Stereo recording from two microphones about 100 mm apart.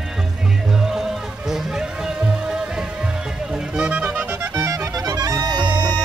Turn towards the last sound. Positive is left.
turn(degrees=-45)  # may be behind; listen again after turning